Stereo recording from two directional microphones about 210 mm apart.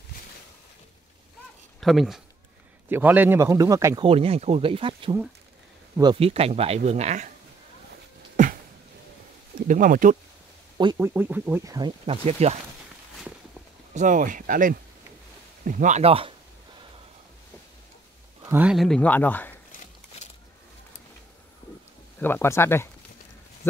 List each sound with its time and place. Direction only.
1.8 s a man's voice: centre (ahead or behind); by 7.3 s 35° right (ahead or behind)
7.9 s a sound: 40° right (ahead or behind)
9.6 s speech: 40° right (ahead or behind)
10.8 s speech: 20° right (ahead or behind)
11.1 s speech: 5° right (ahead or behind); by 12.5 s 30° right (ahead or behind)
13.9 s speech: 40° right (ahead or behind)
18.4 s speech: 10° right (ahead or behind); by 19.5 s 10° left (ahead or behind)
22.2 s speech: 10° left (ahead or behind)